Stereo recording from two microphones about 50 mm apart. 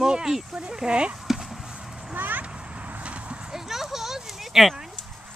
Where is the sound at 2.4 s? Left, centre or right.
Right.